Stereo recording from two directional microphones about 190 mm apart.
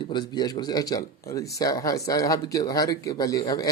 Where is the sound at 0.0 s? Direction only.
25° left (ahead or behind).